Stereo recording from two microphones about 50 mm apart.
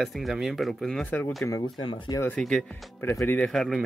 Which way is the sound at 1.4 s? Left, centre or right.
Left.